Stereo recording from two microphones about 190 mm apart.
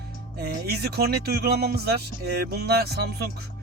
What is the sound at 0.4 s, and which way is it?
Speech, 55° right (ahead or behind).